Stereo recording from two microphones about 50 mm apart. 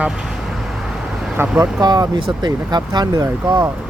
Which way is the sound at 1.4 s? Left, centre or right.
Right.